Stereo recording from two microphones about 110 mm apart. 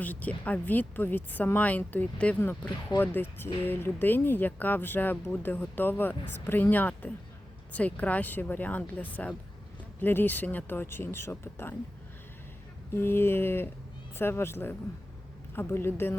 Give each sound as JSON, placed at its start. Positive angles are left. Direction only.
{"t": 0.0, "sound": "speech", "side_deg": 15}
{"t": 12.9, "sound": "speech", "side_deg": 20}